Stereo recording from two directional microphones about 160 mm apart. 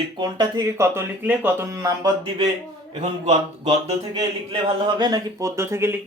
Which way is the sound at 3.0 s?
45° right (ahead or behind).